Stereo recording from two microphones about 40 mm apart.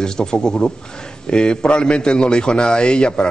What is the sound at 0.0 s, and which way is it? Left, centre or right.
A man's voice, centre.